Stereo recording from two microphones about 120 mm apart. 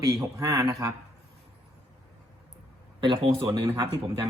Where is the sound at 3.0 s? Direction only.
45° right (ahead or behind).